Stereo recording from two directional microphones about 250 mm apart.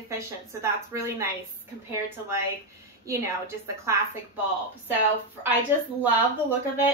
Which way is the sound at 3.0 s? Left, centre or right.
Centre.